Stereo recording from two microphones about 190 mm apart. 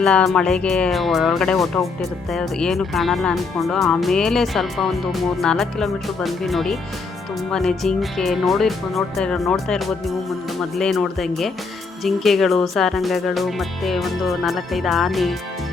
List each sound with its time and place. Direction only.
0.0 s speech: 5° left (ahead or behind)